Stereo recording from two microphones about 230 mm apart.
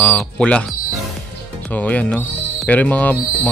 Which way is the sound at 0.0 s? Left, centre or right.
Centre.